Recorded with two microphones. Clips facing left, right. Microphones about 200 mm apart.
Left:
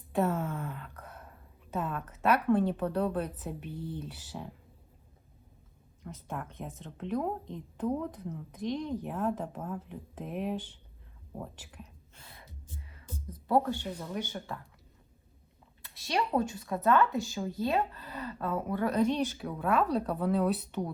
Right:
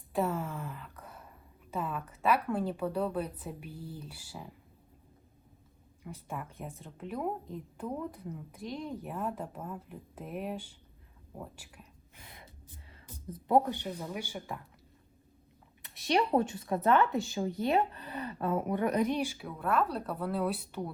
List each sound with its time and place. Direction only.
0.1 s a woman's voice: centre (ahead or behind)
6.0 s a woman's voice: 5° right (ahead or behind)
12.1 s gasp: 15° right (ahead or behind)
12.9 s speech: 20° right (ahead or behind)
15.8 s speech: 20° right (ahead or behind)
19.4 s a woman's voice: 5° right (ahead or behind)